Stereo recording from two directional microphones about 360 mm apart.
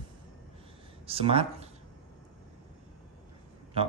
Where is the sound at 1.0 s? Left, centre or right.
Centre.